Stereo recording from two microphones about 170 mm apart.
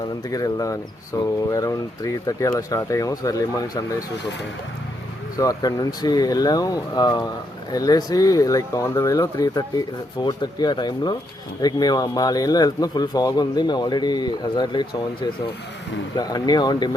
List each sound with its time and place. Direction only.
0.3 s speech: 20° left (ahead or behind)
5.4 s speech: 20° left (ahead or behind)